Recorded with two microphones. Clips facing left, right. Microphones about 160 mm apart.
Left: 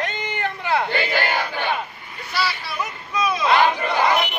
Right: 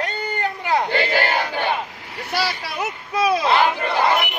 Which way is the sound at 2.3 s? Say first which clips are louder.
Right 1 dB; 40° right (ahead or behind).